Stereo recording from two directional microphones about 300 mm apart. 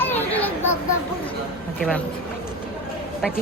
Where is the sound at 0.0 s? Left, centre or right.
Centre.